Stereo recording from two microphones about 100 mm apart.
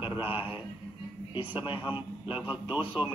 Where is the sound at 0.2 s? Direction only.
60° left (ahead or behind).